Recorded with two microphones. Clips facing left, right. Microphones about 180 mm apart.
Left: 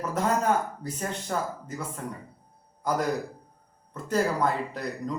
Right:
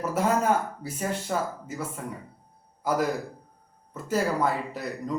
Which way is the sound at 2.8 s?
5° right (ahead or behind).